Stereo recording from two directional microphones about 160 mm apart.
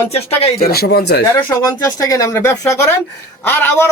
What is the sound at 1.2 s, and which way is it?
A man's voice, 20° left (ahead or behind).